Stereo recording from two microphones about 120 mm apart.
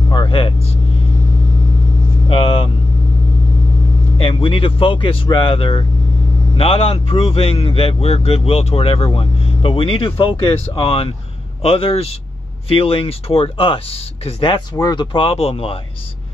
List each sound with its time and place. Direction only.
0.1 s vehicle: 45° left (ahead or behind)
2.2 s vehicle: 50° left (ahead or behind)
4.2 s a man's voice: 50° left (ahead or behind)
14.8 s speech: 35° left (ahead or behind)
15.1 s a man's voice: 50° left (ahead or behind)